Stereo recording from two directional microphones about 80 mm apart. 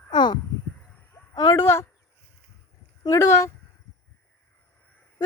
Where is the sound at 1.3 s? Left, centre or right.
Left.